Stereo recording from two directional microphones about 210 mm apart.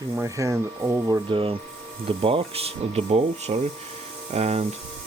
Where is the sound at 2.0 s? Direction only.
25° right (ahead or behind).